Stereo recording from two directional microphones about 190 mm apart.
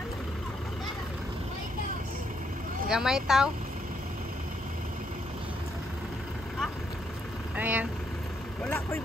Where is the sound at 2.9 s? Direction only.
5° right (ahead or behind).